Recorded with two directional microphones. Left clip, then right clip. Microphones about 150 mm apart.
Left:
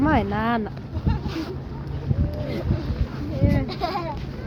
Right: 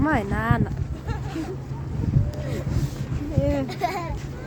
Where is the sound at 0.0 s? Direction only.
Centre (ahead or behind).